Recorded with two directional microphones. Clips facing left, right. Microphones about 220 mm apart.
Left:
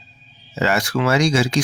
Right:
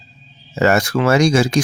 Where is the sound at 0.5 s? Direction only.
45° right (ahead or behind).